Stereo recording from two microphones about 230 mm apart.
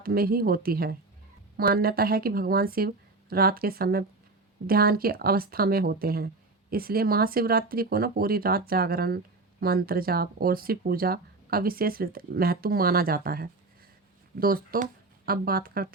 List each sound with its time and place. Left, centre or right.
0.0 s speech: right